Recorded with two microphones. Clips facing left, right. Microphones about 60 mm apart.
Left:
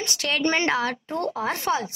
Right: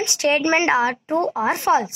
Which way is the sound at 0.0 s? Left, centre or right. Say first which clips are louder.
Right 5 dB; right.